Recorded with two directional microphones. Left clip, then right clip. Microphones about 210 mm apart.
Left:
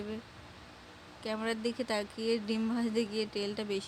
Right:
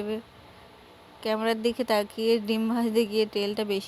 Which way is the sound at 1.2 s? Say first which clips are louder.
Right 9 dB; 25° right (ahead or behind).